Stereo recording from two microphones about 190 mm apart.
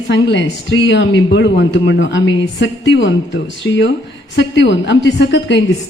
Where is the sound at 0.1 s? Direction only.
75° left (ahead or behind).